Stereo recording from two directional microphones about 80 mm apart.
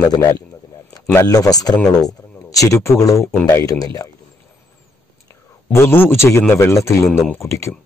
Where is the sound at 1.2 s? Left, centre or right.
Left.